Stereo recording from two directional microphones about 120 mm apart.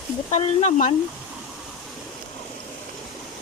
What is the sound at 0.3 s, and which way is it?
Speech, 85° left.